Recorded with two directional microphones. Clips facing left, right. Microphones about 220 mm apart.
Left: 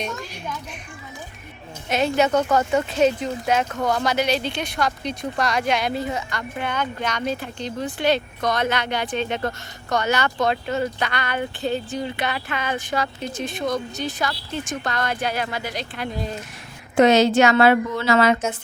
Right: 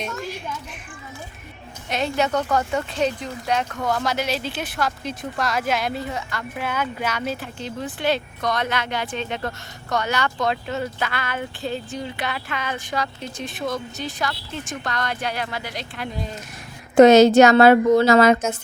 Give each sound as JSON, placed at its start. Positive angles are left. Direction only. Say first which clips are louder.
{"t": 1.9, "sound": "speech", "louder": "left 3 dB", "side_deg": 0}
{"t": 16.9, "sound": "a woman's voice", "louder": "right 5 dB", "side_deg": -45}